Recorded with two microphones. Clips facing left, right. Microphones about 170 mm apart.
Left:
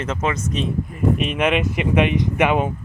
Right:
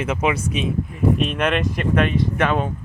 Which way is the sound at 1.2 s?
10° left (ahead or behind).